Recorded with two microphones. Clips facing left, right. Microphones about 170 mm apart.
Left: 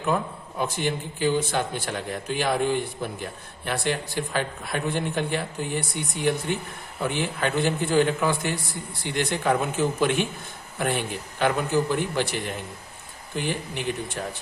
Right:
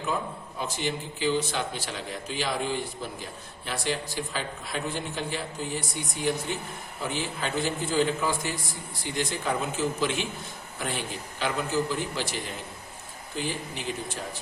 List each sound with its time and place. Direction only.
0.6 s a man's voice: 55° left (ahead or behind)